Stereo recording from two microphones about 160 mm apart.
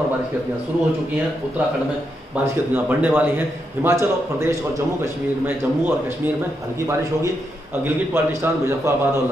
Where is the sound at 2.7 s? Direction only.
10° right (ahead or behind).